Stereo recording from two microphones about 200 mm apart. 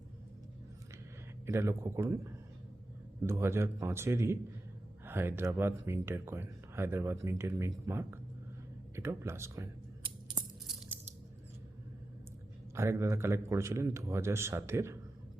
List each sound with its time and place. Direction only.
1.5 s speech: 15° right (ahead or behind)
10.0 s coin: 20° right (ahead or behind)
12.7 s speech: 15° right (ahead or behind)